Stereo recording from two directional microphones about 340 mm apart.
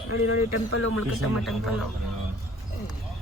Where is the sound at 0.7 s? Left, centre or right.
Left.